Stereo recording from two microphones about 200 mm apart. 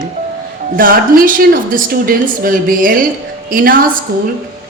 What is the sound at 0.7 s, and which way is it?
A woman's voice, 45° right (ahead or behind).